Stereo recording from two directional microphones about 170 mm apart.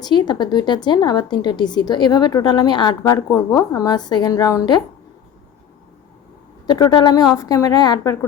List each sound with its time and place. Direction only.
0.0 s a woman's voice: 25° left (ahead or behind)
6.7 s a woman's voice: 25° left (ahead or behind)